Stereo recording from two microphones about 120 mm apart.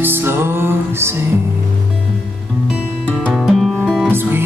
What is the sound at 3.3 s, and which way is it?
Music, centre (ahead or behind).